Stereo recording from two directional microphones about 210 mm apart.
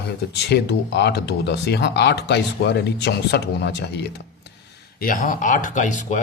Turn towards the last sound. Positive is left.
turn(degrees=35)  # may be behind; listen again after turning